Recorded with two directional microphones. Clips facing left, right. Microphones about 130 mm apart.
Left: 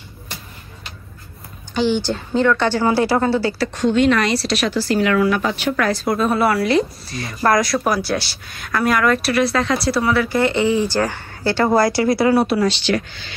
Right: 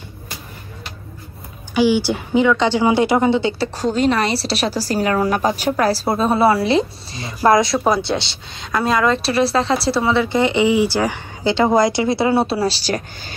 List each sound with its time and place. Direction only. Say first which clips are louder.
1.7 s a woman's voice: right 3 dB; 10° right (ahead or behind); by 13.3 s 40° right (ahead or behind)